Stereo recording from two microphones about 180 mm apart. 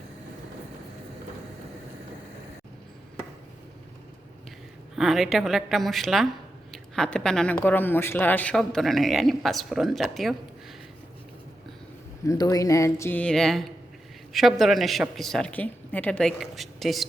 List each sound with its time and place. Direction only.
4.9 s speech: centre (ahead or behind)
12.2 s speech: 20° left (ahead or behind); by 17.1 s centre (ahead or behind)